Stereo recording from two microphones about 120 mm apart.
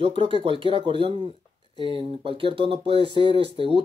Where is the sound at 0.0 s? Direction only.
50° right (ahead or behind).